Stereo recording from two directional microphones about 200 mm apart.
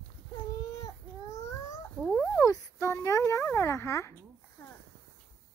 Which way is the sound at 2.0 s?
5° left (ahead or behind).